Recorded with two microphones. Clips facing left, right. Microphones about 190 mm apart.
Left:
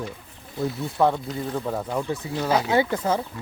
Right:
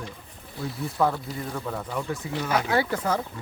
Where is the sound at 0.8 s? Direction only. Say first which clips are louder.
Left 2 dB; 25° left (ahead or behind).